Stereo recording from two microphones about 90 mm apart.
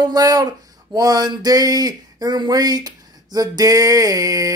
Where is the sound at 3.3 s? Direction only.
45° right (ahead or behind).